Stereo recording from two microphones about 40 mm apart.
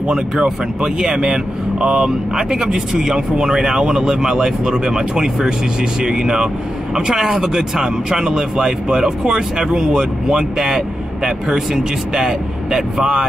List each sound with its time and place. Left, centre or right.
0.1 s speech: right